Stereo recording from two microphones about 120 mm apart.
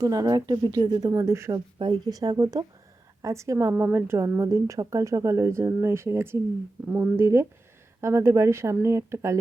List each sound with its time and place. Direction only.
0.0 s speech: 30° right (ahead or behind)
1.5 s a woman's voice: 35° right (ahead or behind)